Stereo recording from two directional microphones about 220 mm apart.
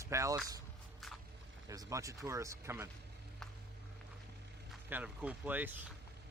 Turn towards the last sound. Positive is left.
turn(degrees=-10)  # may be behind; listen again after turning